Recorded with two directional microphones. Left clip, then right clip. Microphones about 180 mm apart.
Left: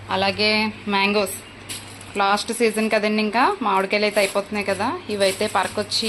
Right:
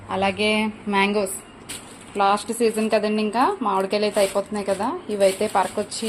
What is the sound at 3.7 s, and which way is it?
Speech, 10° right (ahead or behind).